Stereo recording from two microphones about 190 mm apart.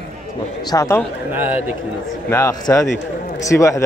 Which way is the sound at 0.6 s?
15° left (ahead or behind).